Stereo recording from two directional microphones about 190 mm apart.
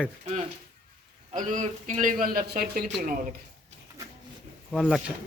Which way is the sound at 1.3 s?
40° right (ahead or behind).